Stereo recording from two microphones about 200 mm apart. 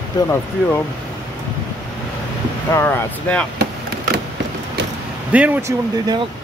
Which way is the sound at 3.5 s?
50° right (ahead or behind).